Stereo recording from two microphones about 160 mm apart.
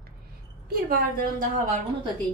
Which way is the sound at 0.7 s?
70° right (ahead or behind).